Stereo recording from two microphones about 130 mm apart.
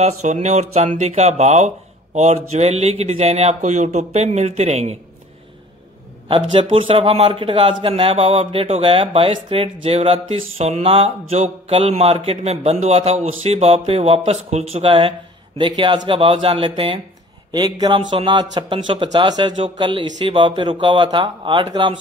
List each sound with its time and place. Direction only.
0.0 s speech: 60° right (ahead or behind)
6.2 s speech: 40° right (ahead or behind)
17.5 s speech: 30° right (ahead or behind)